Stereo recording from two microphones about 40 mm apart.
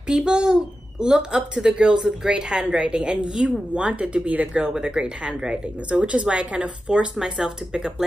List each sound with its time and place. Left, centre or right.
0.0 s a child's voice: centre; by 4.5 s right
4.6 s a child's voice: right